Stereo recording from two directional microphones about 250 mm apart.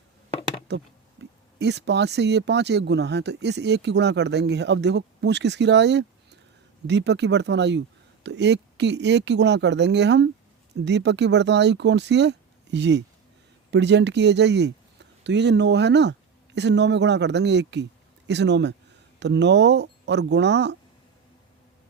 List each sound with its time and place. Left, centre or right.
0.7 s speech: right